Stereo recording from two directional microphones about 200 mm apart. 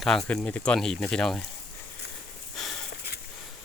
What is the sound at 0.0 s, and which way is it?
Speech, centre (ahead or behind).